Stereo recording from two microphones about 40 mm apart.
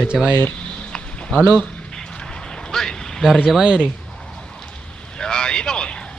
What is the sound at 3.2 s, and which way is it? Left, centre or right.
Speech, centre.